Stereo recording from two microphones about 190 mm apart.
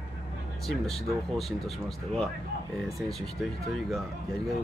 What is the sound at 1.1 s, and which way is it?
Speech, centre (ahead or behind).